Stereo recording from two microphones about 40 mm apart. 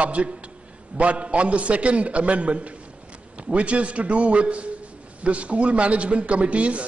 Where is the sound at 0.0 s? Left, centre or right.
Right.